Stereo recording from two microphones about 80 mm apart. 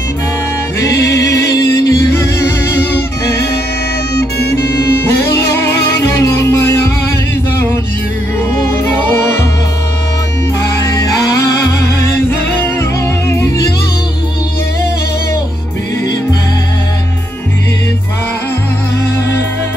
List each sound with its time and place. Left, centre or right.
1.9 s music: left
6.3 s music: left
8.7 s music: left
12.7 s music: left